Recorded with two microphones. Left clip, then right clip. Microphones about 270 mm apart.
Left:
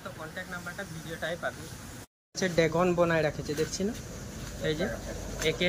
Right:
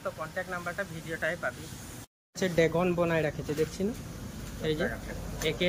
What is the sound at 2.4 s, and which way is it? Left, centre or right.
Speech, centre.